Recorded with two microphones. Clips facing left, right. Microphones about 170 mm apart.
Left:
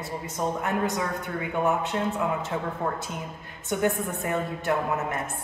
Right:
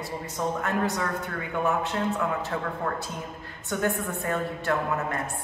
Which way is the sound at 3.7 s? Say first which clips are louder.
Left 2 dB; 20° left (ahead or behind).